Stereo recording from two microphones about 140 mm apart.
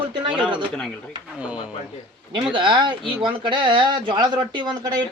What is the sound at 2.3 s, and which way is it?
Speech, 35° right (ahead or behind).